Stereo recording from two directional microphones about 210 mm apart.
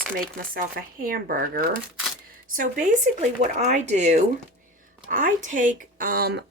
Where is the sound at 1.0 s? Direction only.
45° right (ahead or behind).